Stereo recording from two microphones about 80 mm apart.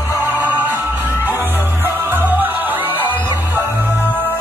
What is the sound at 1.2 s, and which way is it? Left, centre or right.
Music, right.